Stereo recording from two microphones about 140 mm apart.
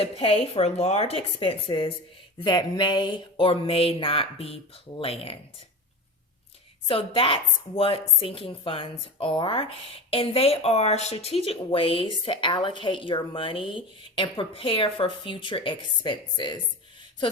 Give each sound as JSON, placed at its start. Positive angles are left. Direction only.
{"t": 0.0, "sound": "a woman's voice", "side_deg": 45}
{"t": 6.8, "sound": "speech", "side_deg": 40}